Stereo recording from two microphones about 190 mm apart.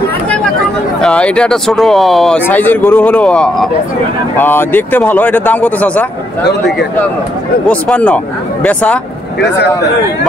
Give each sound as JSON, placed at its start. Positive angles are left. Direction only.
{"t": 1.0, "sound": "speech", "side_deg": 5}
{"t": 6.4, "sound": "speech", "side_deg": 60}
{"t": 7.6, "sound": "speech", "side_deg": 5}